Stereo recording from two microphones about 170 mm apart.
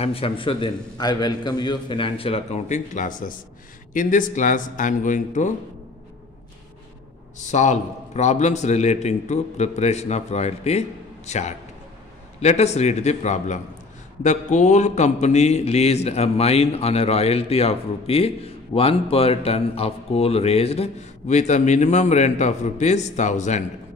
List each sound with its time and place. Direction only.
0.0 s speech: 35° left (ahead or behind)
7.4 s speech: 45° left (ahead or behind)